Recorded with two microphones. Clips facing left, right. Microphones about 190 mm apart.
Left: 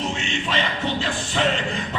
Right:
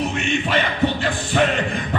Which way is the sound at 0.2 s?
55° right (ahead or behind).